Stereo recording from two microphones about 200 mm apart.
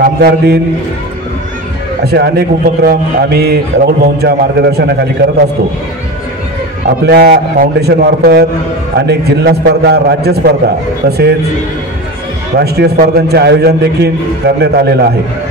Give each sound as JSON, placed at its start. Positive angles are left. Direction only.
{"t": 0.0, "sound": "a man's voice", "side_deg": -50}
{"t": 2.0, "sound": "a man's voice", "side_deg": -55}
{"t": 7.1, "sound": "a man's voice", "side_deg": -50}
{"t": 12.5, "sound": "a man's voice", "side_deg": -50}